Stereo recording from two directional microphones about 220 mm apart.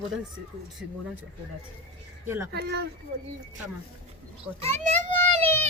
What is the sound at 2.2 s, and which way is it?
Speech, 10° right (ahead or behind).